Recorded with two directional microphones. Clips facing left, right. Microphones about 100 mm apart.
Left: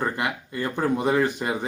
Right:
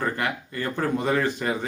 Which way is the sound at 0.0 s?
15° left (ahead or behind).